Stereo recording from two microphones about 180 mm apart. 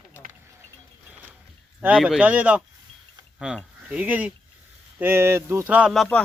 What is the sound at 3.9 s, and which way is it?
A man's voice, 5° right (ahead or behind).